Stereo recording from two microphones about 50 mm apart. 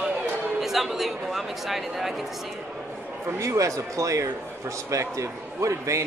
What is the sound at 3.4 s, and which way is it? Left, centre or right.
A man's voice, right.